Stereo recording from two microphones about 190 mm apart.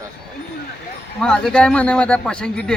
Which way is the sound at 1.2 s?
5° left (ahead or behind).